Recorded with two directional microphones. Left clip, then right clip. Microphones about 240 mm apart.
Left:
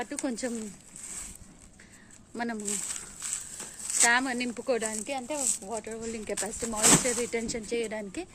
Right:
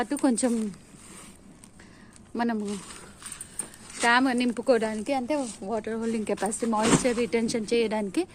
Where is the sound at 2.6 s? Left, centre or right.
Left.